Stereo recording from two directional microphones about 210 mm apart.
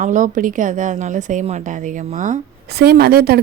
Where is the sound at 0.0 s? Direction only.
35° right (ahead or behind).